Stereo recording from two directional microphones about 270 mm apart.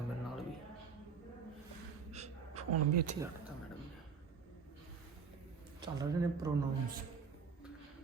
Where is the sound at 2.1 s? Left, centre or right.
Right.